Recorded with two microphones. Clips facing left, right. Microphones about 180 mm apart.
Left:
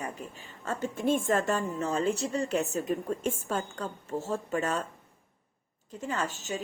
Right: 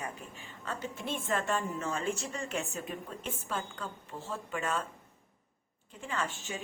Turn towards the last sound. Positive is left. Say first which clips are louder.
# left 4 dB
turn(degrees=40)  # may be behind; listen again after turning